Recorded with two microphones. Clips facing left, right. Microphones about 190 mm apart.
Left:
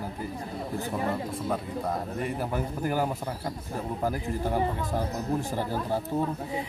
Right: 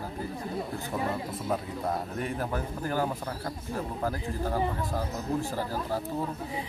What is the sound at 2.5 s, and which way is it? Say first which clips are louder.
Speech: left 2 dB; 10° left (ahead or behind).